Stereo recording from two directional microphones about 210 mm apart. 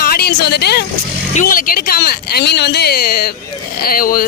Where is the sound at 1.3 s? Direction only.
40° left (ahead or behind).